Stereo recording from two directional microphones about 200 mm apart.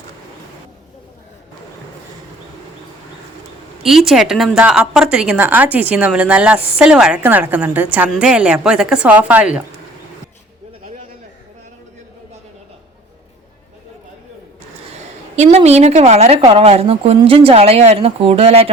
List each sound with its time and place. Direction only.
3.8 s a woman's voice: centre (ahead or behind)
15.4 s a woman's voice: 35° right (ahead or behind)